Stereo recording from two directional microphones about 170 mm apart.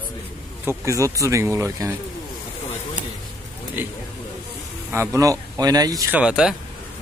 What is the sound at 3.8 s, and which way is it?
Speech, 15° right (ahead or behind).